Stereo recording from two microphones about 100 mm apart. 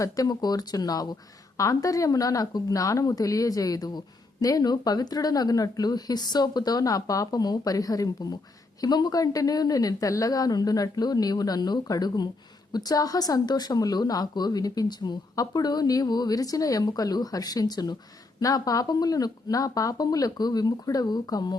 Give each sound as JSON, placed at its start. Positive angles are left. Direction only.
{"t": 0.0, "sound": "speech", "side_deg": 40}